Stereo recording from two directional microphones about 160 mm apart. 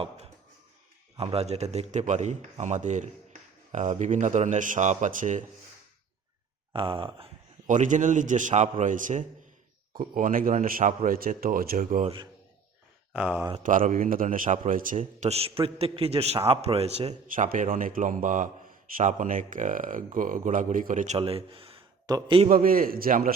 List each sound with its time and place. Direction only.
1.1 s speech: 40° right (ahead or behind)
6.7 s a man's voice: 35° right (ahead or behind)
7.7 s a man's voice: 50° right (ahead or behind)
13.1 s speech: 10° right (ahead or behind)
13.7 s a man's voice: 55° right (ahead or behind); by 17.2 s 40° right (ahead or behind)
17.2 s a man's voice: 55° right (ahead or behind); by 22.4 s 35° right (ahead or behind)
22.4 s a man's voice: 60° right (ahead or behind)